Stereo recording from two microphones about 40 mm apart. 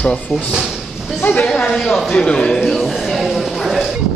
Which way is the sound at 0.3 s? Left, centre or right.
Left.